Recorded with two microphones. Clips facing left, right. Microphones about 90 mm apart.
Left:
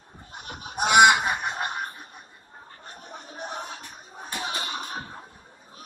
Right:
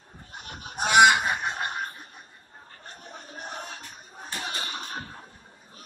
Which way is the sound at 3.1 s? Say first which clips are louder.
Left 3 dB; 20° left (ahead or behind).